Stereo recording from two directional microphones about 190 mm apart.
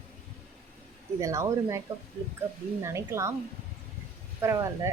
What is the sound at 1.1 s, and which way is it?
Speech, 15° right (ahead or behind).